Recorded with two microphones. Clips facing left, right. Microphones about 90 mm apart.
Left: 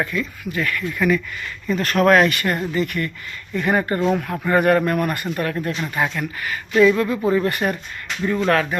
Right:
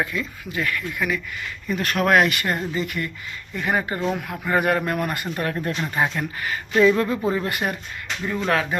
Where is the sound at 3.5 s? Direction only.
5° right (ahead or behind); by 7.1 s 30° right (ahead or behind).